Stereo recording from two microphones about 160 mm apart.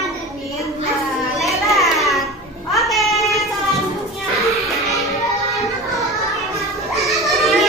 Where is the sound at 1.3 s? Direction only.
Centre (ahead or behind).